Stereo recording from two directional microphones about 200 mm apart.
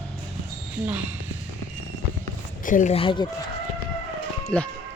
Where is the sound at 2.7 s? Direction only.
40° left (ahead or behind).